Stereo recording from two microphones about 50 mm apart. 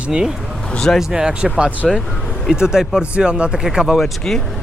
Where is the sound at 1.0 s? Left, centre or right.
Centre.